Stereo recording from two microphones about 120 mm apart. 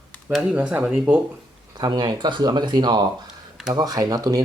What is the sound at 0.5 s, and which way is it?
Speech, 10° right (ahead or behind).